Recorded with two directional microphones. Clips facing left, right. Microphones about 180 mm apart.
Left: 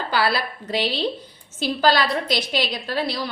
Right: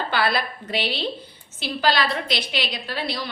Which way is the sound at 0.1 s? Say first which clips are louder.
Left 2 dB; 35° left (ahead or behind).